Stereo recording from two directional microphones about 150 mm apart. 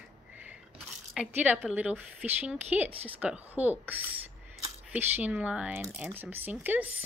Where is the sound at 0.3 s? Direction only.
10° right (ahead or behind).